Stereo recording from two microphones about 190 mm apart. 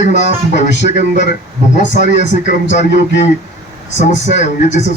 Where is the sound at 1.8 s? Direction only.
40° left (ahead or behind).